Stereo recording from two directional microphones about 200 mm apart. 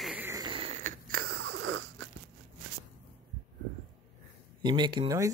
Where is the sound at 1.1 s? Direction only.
55° right (ahead or behind).